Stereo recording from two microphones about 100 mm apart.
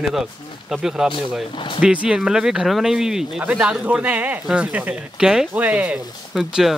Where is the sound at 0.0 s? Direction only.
5° right (ahead or behind).